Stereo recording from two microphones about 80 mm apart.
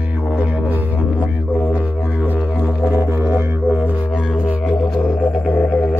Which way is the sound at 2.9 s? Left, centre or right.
Right.